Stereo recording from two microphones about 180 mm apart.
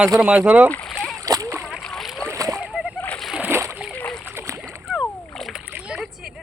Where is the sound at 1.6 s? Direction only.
Centre (ahead or behind).